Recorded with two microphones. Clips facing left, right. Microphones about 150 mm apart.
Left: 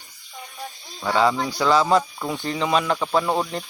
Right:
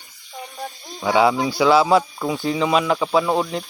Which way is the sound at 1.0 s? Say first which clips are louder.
Right 3 dB; 10° right (ahead or behind).